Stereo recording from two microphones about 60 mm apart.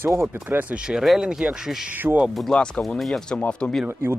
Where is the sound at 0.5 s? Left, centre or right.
Right.